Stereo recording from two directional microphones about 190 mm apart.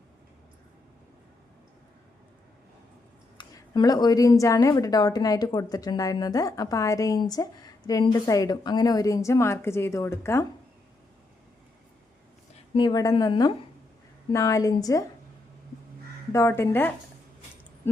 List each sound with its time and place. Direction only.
3.3 s speech: 20° left (ahead or behind)
12.7 s a woman's voice: 25° left (ahead or behind)
16.3 s a woman's voice: 15° left (ahead or behind)